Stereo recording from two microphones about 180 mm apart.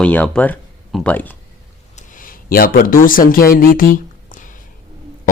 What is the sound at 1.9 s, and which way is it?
A man's voice, 50° left (ahead or behind).